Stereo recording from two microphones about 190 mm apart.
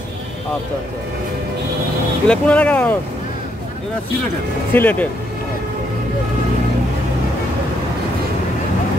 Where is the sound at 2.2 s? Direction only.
5° left (ahead or behind).